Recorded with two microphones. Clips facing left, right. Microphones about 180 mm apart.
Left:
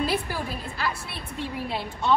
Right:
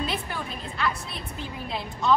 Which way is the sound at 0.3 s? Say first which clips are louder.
Left 2 dB; 35° left (ahead or behind).